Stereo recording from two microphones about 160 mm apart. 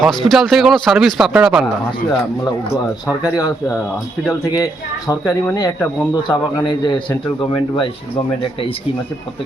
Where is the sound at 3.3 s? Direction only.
20° left (ahead or behind).